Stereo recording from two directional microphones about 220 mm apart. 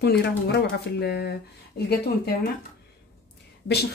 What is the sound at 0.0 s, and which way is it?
Speech, 45° left (ahead or behind).